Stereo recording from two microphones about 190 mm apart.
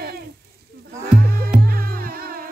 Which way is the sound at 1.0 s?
55° right (ahead or behind).